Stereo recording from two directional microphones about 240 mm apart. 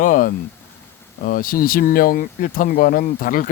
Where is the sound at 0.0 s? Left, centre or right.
Left.